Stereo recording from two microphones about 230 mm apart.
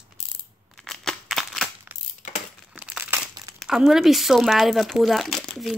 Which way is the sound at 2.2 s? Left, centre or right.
Left.